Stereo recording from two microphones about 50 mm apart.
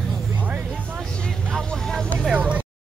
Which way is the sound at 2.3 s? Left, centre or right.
Right.